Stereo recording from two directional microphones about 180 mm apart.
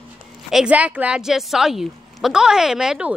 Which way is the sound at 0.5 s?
5° right (ahead or behind).